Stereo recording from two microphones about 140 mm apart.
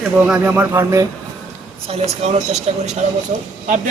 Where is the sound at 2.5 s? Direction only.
55° right (ahead or behind).